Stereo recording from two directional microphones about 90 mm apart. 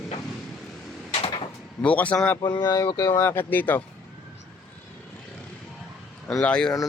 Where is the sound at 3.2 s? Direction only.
25° left (ahead or behind).